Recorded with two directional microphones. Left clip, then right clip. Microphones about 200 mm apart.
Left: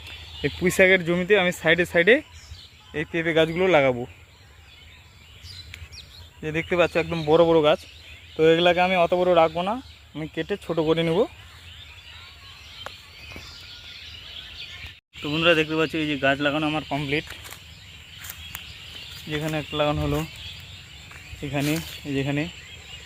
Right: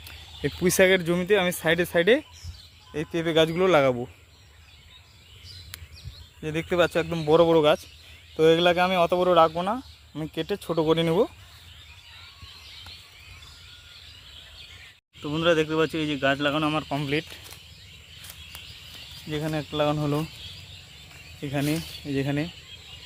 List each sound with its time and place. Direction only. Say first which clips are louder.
0.7 s speech: left 2 dB; 20° right (ahead or behind)
6.4 s speech: left 2 dB; 15° right (ahead or behind)
15.2 s speech: left 3 dB; 5° right (ahead or behind)
17.2 s a sound: left 4 dB; 10° left (ahead or behind)
19.3 s speech: left 2 dB; 5° right (ahead or behind)
21.4 s speech: left 2 dB; 5° right (ahead or behind)